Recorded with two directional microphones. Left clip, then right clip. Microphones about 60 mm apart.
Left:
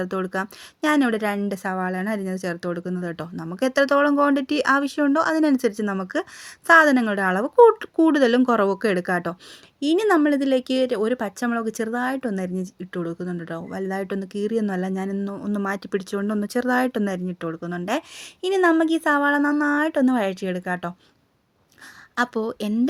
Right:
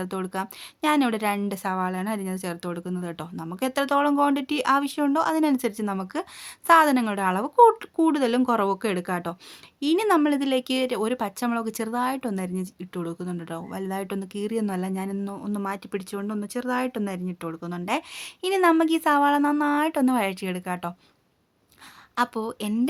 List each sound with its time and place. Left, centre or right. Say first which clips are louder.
0.0 s speech: left 4 dB; left
0.8 s a woman's voice: left 2 dB; left
9.8 s speech: left 2 dB; left
15.4 s speech: left 4 dB; left
17.4 s speech: left 2 dB; left
18.2 s speech: left 2 dB; centre
22.1 s speech: left 2 dB; left